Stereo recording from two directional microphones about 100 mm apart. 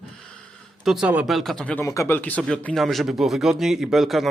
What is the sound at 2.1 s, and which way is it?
A man's voice, 15° left (ahead or behind).